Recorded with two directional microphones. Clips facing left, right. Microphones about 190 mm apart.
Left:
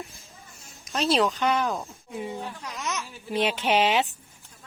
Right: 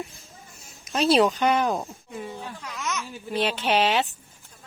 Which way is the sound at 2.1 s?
15° left (ahead or behind).